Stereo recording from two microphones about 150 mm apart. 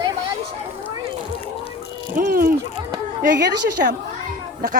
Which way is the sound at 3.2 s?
90° right.